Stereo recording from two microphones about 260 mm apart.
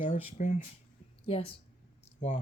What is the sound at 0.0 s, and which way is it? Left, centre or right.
Speech, left.